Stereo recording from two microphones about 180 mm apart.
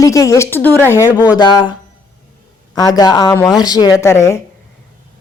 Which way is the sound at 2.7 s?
20° left (ahead or behind).